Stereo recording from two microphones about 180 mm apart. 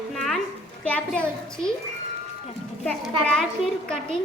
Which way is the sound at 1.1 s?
5° left (ahead or behind).